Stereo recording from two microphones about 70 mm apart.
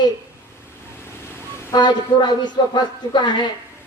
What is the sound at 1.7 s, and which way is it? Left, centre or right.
Speech, left.